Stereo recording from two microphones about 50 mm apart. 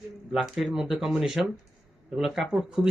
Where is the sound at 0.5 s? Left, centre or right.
Centre.